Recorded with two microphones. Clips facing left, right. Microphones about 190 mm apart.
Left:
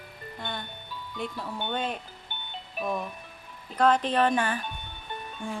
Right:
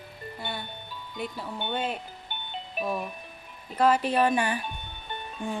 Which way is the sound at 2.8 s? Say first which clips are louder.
Even; 15° right (ahead or behind).